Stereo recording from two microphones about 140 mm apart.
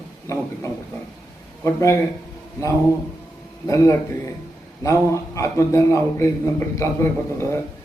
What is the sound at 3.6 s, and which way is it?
A man's voice, 20° left (ahead or behind).